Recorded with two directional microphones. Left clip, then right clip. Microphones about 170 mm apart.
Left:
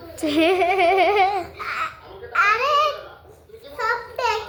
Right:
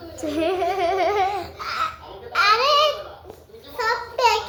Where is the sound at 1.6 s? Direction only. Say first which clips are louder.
Right 1 dB; centre (ahead or behind).